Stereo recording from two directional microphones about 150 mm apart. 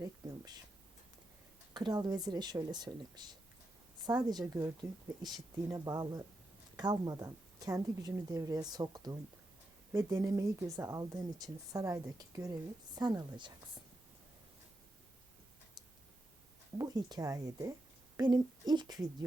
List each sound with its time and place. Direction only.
0.0 s a sound: 25° right (ahead or behind)
1.7 s speech: 30° right (ahead or behind)
16.7 s speech: 25° right (ahead or behind)